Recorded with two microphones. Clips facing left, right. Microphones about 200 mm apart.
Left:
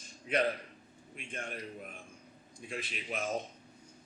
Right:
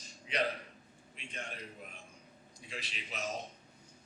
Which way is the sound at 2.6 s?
50° left (ahead or behind).